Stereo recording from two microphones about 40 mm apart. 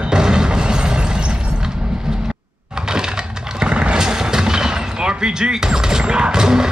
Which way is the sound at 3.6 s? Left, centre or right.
Right.